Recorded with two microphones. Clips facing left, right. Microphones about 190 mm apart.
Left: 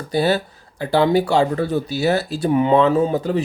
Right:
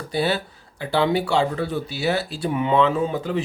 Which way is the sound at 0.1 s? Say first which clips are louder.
Left 5 dB; 40° left (ahead or behind).